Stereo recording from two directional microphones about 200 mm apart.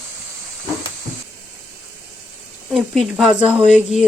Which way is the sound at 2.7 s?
Centre (ahead or behind).